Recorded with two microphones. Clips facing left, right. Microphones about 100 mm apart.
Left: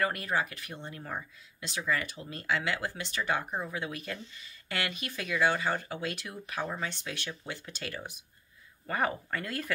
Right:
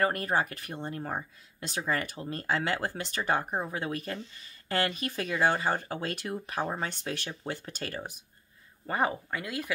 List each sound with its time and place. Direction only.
0.0 s speech: 40° right (ahead or behind)
8.8 s speech: 25° right (ahead or behind)
9.3 s a woman's voice: 10° right (ahead or behind)